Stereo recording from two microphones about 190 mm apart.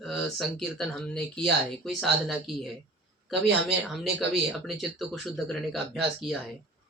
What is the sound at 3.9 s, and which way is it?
Speech, centre (ahead or behind).